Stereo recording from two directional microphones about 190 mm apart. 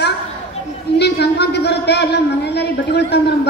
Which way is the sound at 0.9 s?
60° left (ahead or behind).